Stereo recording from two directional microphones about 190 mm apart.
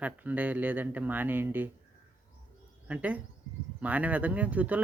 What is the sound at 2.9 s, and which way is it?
Speech, 10° right (ahead or behind).